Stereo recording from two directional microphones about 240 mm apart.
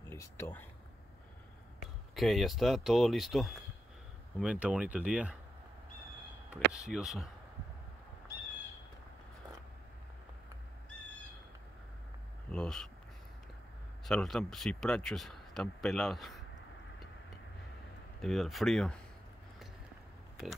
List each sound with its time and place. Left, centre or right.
0.1 s speech: centre
2.1 s speech: centre
6.5 s speech: centre
12.4 s a sound: centre
14.0 s speech: centre
18.2 s speech: centre